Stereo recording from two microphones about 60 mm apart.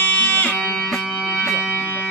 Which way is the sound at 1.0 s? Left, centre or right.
Centre.